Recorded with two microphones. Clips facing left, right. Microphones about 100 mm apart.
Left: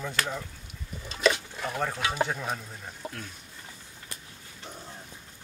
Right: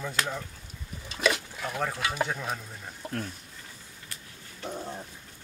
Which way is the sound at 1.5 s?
Centre (ahead or behind).